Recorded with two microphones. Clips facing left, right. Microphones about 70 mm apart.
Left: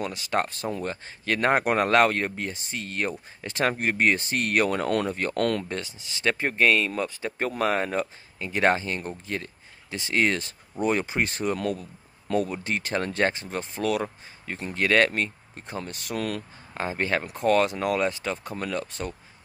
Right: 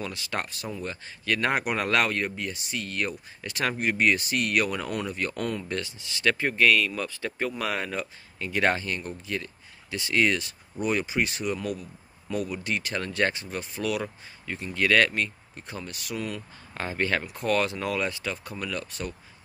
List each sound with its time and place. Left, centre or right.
0.0 s speech: left
4.8 s speech: left
5.3 s speech: left
5.7 s speech: left
7.3 s speech: left
12.5 s speech: left
16.2 s speech: left
16.7 s speech: left